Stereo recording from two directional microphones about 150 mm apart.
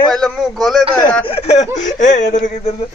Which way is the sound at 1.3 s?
45° left (ahead or behind).